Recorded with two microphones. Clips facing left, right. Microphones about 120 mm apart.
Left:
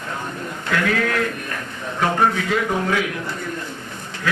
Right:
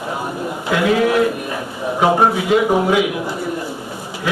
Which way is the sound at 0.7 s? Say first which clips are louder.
Right 6 dB; 15° right (ahead or behind).